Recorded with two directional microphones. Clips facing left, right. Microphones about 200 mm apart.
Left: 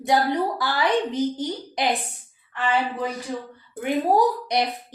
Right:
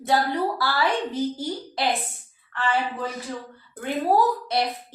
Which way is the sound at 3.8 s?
15° left (ahead or behind).